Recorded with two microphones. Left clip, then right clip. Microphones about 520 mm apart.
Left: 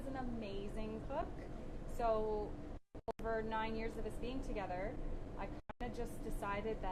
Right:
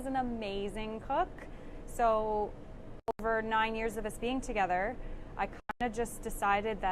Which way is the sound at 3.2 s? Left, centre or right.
Right.